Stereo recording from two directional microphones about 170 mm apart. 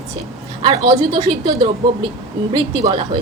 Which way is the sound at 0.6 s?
25° right (ahead or behind).